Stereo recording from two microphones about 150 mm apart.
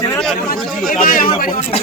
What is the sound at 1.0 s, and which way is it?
Speech, 70° left (ahead or behind).